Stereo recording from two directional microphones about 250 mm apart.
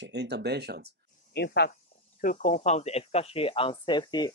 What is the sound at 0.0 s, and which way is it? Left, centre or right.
Speech, right.